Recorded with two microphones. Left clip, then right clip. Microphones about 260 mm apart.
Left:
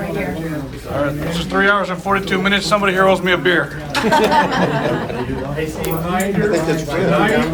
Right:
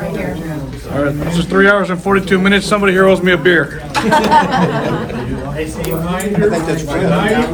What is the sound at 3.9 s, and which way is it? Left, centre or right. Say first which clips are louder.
Speech: right 3 dB; right.